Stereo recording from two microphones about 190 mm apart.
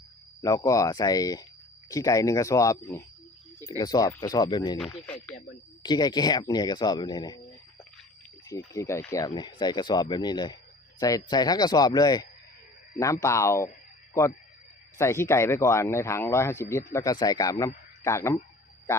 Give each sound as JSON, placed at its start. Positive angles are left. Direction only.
{"t": 0.4, "sound": "speech", "side_deg": 15}
{"t": 5.8, "sound": "speech", "side_deg": 20}
{"t": 8.4, "sound": "a man's voice", "side_deg": 15}